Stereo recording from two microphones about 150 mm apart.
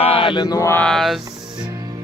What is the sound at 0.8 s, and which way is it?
Speech, centre (ahead or behind).